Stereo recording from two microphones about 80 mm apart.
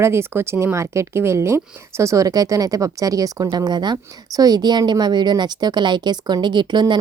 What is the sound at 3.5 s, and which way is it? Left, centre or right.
A woman's voice, right.